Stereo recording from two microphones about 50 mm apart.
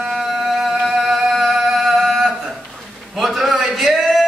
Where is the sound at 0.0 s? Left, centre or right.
Centre.